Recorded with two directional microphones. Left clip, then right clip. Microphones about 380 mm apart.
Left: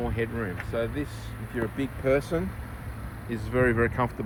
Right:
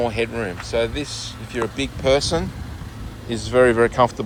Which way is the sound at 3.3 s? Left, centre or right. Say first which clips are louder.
Right 9 dB; centre.